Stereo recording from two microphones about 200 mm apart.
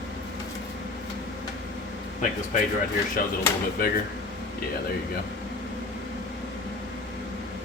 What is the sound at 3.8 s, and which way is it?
Speech, 45° left (ahead or behind).